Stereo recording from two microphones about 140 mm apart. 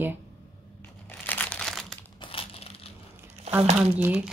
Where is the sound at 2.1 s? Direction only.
40° left (ahead or behind).